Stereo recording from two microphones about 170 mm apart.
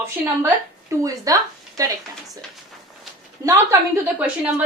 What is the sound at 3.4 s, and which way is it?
Speech, 15° right (ahead or behind).